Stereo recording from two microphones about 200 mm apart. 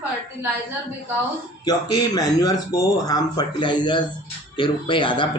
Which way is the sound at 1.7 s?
20° left (ahead or behind).